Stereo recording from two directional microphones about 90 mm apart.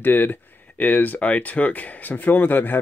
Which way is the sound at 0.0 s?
20° left (ahead or behind).